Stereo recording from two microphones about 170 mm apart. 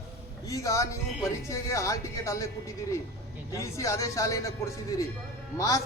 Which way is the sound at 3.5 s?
15° left (ahead or behind).